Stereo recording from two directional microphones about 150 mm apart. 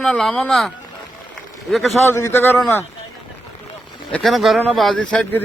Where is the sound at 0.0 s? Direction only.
5° left (ahead or behind).